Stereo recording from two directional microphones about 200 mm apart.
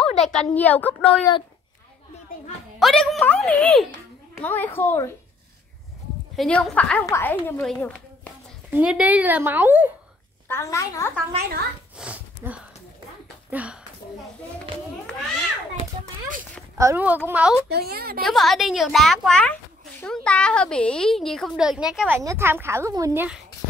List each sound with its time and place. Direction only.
0.0 s a child's voice: 5° left (ahead or behind)
2.8 s a child's voice: centre (ahead or behind)
6.3 s a woman's voice: 5° left (ahead or behind)
8.6 s speech: 5° right (ahead or behind)
10.5 s a woman's voice: 15° left (ahead or behind)
12.0 s sniff: 5° right (ahead or behind)
13.5 s speech: 5° right (ahead or behind)
16.7 s speech: 15° right (ahead or behind)
17.6 s a woman's voice: 50° right (ahead or behind)
18.2 s a child's voice: centre (ahead or behind)